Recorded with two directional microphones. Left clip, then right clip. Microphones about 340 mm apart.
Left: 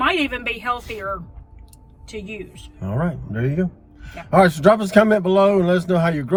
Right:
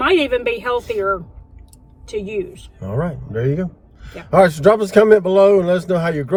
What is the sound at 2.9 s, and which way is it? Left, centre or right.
A man's voice, centre.